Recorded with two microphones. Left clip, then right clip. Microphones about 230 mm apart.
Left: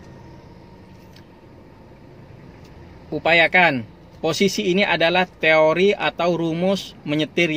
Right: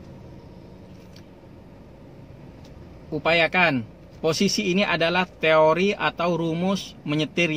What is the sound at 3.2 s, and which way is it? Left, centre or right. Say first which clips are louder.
A man's voice: left 5 dB; centre.